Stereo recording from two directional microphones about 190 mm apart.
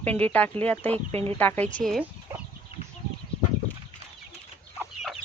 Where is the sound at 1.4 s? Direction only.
10° left (ahead or behind).